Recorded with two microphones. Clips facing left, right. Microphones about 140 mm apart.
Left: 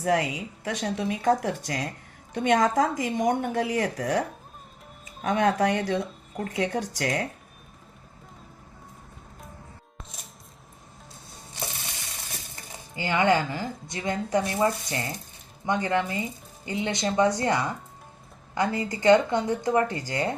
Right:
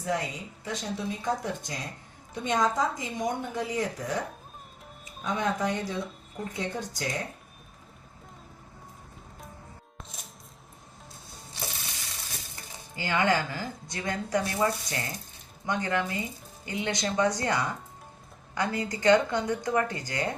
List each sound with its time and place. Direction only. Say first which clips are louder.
0.0 s a woman's voice: left 6 dB; 80° left
5.2 s a woman's voice: left 6 dB; 70° left (ahead or behind)
10.0 s music: even; centre (ahead or behind)
13.0 s speech: left 3 dB; 20° left (ahead or behind)